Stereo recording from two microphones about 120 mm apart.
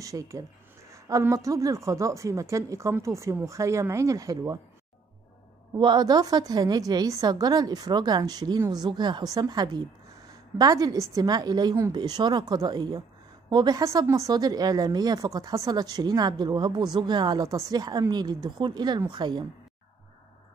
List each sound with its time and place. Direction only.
0.0 s a woman's voice: 25° right (ahead or behind)
5.8 s a woman's voice: 35° right (ahead or behind)